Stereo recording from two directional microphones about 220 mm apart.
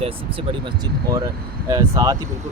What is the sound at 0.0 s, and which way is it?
Speech, 25° right (ahead or behind).